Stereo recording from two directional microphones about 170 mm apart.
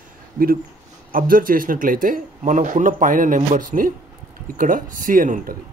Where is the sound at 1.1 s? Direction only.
55° right (ahead or behind).